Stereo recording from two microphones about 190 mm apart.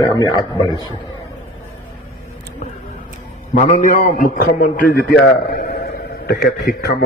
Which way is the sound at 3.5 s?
40° left (ahead or behind).